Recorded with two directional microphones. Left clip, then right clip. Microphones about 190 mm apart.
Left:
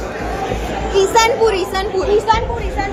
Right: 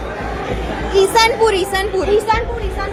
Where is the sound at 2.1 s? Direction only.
15° right (ahead or behind).